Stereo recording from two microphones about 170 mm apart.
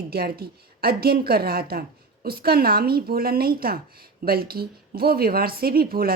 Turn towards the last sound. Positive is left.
turn(degrees=-60)  # may be behind; listen again after turning